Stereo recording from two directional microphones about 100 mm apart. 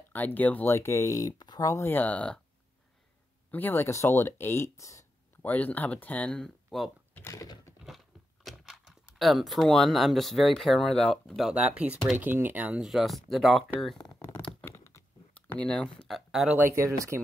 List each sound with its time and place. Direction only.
0.1 s speech: 15° left (ahead or behind); by 1.3 s 30° left (ahead or behind)
1.6 s a sound: 30° left (ahead or behind)
1.9 s speech: 15° left (ahead or behind)
3.5 s speech: 20° left (ahead or behind)
5.4 s speech: 15° left (ahead or behind)
7.2 s a sound: 35° left (ahead or behind)
7.8 s speech: centre (ahead or behind)
12.8 s speech: centre (ahead or behind)
14.3 s tearing: 20° left (ahead or behind)
15.3 s speech: 15° left (ahead or behind); by 16.5 s 5° right (ahead or behind)
16.5 s speech: 25° right (ahead or behind)